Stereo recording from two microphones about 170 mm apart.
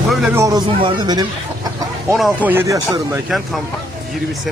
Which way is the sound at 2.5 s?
15° right (ahead or behind).